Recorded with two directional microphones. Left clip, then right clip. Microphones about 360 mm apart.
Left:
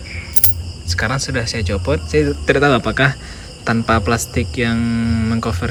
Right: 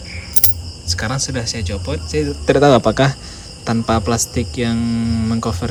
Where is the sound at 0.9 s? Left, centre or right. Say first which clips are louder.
Left 2 dB; centre.